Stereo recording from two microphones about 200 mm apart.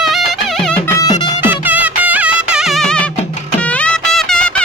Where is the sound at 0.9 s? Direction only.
20° left (ahead or behind).